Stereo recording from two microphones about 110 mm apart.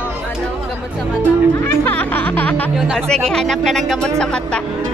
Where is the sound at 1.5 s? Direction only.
20° left (ahead or behind).